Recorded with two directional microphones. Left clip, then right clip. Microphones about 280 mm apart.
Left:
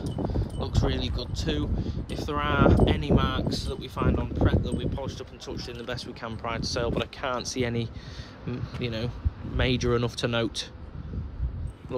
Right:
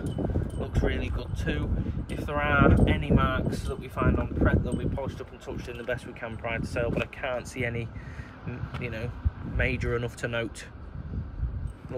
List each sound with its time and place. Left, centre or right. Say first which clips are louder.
0.0 s a sound: even; centre
0.7 s speech: left 1 dB; centre
6.5 s speech: left 1 dB; left
7.2 s speech: left 2 dB; centre
7.6 s speech: left 2 dB; left
9.6 s speech: left 3 dB; centre